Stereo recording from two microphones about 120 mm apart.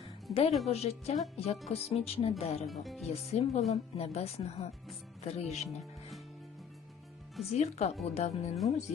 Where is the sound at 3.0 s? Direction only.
65° left (ahead or behind).